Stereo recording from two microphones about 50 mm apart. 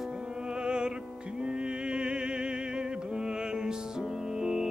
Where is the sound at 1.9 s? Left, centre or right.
Centre.